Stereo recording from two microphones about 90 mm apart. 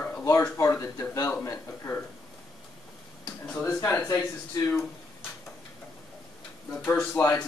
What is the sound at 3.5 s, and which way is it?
Speech, 30° left (ahead or behind).